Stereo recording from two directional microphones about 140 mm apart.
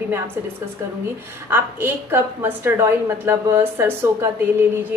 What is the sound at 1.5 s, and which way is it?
A woman's voice, 15° right (ahead or behind).